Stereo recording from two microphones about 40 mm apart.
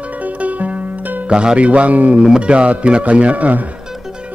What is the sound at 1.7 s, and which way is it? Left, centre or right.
Speech, right.